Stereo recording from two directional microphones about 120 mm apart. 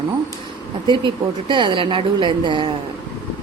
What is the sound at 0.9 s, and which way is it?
A woman's voice, 40° right (ahead or behind).